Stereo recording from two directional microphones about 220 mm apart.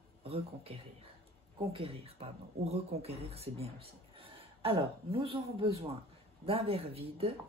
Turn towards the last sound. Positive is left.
turn(degrees=-25)  # may be behind; listen again after turning